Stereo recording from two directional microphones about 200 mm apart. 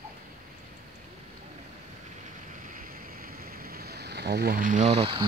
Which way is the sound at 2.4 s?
40° right (ahead or behind).